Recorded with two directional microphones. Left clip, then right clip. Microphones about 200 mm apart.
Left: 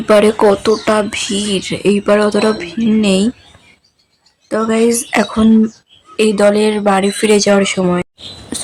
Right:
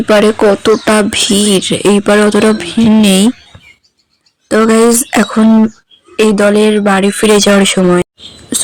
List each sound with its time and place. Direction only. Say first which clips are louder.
0.0 s speech: right 2 dB; 10° right (ahead or behind)
0.9 s speech: right 4 dB; 25° right (ahead or behind)
4.4 s speech: right 6 dB; 20° right (ahead or behind)
8.5 s whispering: right 7 dB; 15° right (ahead or behind)